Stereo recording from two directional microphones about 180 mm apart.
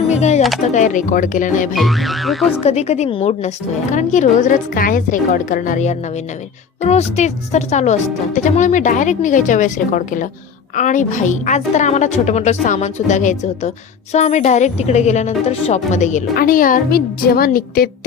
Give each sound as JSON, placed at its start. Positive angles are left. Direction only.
{"t": 0.1, "sound": "music", "side_deg": 40}
{"t": 0.7, "sound": "a woman's voice", "side_deg": 45}
{"t": 1.7, "sound": "speech", "side_deg": 0}
{"t": 2.6, "sound": "a woman's voice", "side_deg": 35}
{"t": 16.3, "sound": "a woman's voice", "side_deg": 55}